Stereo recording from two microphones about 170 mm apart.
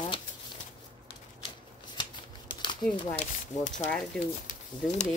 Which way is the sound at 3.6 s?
45° left (ahead or behind).